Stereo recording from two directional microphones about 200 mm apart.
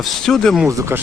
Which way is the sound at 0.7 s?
15° right (ahead or behind).